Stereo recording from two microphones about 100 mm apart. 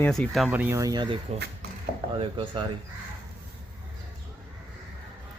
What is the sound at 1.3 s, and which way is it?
Speech, 90° right.